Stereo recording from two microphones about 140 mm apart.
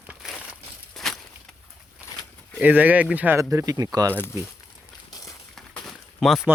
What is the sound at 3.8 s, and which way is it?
Speech, 25° right (ahead or behind).